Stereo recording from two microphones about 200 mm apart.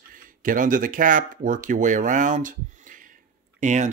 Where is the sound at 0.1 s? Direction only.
40° right (ahead or behind).